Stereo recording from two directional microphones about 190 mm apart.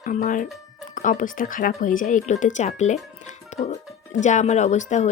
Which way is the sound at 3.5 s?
40° left (ahead or behind).